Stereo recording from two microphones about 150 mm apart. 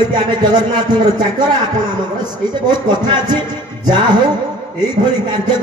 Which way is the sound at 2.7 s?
30° right (ahead or behind).